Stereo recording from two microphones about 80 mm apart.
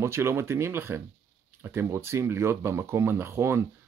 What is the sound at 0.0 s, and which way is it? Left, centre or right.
Speech, right.